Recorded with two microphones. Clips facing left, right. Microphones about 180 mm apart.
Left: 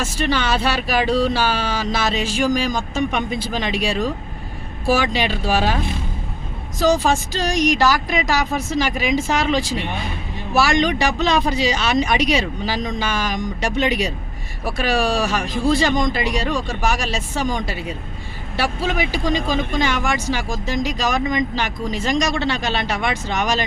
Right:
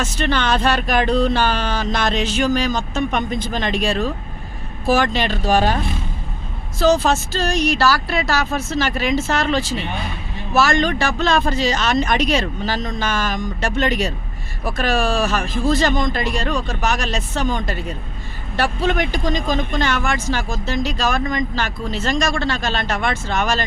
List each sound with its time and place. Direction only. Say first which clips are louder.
0.0 s speech: right 1 dB; 10° left (ahead or behind)